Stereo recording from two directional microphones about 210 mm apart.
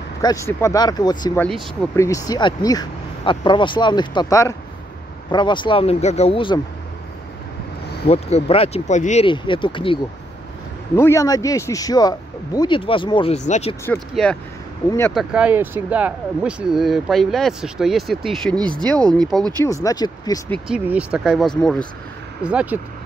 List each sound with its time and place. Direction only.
0.2 s speech: 15° left (ahead or behind)
1.4 s speech: 5° left (ahead or behind)
2.0 s speech: 15° left (ahead or behind)
8.1 s speech: 30° left (ahead or behind)
11.0 s speech: 15° left (ahead or behind); by 13.7 s 30° left (ahead or behind)
13.8 s speech: 5° left (ahead or behind)
15.1 s speech: 5° right (ahead or behind)
19.6 s speech: 15° left (ahead or behind)
20.5 s speech: 5° right (ahead or behind)
22.4 s speech: 5° right (ahead or behind)